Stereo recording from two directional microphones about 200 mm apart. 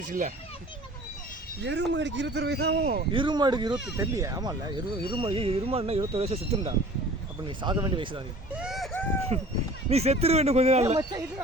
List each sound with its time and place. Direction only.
0.0 s speech: 40° right (ahead or behind)
1.6 s speech: 60° right (ahead or behind)
3.1 s speech: 25° right (ahead or behind)
8.5 s a sound: centre (ahead or behind)
9.3 s speech: 30° right (ahead or behind)